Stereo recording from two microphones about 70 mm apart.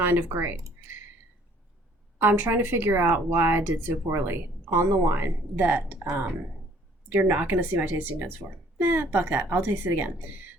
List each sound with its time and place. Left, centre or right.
0.0 s speech: right
2.1 s a woman's voice: right